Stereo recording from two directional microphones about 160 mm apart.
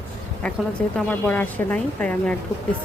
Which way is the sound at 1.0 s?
10° left (ahead or behind).